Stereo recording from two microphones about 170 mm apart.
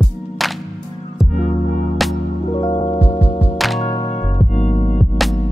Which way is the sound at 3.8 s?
25° left (ahead or behind).